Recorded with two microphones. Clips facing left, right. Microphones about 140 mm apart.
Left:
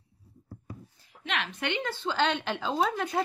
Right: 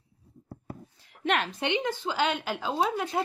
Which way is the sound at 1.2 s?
50° right (ahead or behind).